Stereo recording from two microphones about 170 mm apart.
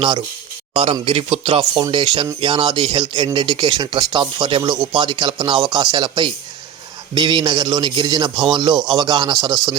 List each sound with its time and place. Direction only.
0.7 s speech: 35° right (ahead or behind)